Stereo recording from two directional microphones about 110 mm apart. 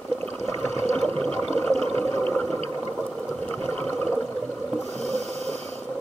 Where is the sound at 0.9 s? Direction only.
10° left (ahead or behind).